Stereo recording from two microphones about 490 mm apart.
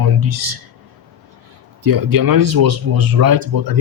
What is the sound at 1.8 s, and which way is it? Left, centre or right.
Speech, right.